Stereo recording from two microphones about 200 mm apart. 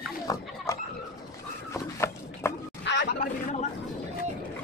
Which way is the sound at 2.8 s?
60° left (ahead or behind).